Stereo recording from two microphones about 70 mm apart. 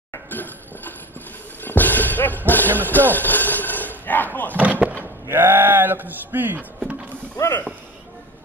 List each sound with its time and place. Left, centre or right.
0.3 s a sound: left
1.6 s music: left
2.9 s slam: left
4.6 s slam: right
5.3 s speech: right